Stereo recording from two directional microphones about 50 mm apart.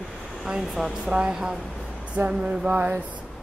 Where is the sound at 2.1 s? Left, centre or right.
Right.